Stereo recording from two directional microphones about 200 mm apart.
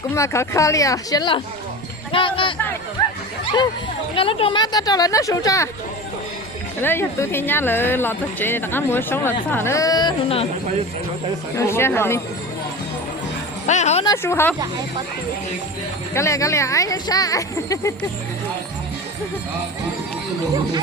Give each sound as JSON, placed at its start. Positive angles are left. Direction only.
{"t": 0.1, "sound": "speech", "side_deg": 15}
{"t": 4.1, "sound": "speech", "side_deg": 25}
{"t": 6.8, "sound": "speech", "side_deg": 10}
{"t": 11.5, "sound": "speech", "side_deg": 10}
{"t": 13.7, "sound": "a sound", "side_deg": 35}
{"t": 14.0, "sound": "speech", "side_deg": 15}
{"t": 16.1, "sound": "speech", "side_deg": 15}